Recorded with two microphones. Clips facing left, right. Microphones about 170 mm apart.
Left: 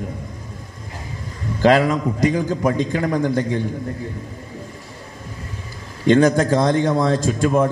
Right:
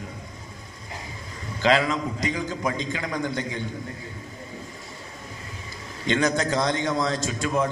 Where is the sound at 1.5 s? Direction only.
45° left (ahead or behind).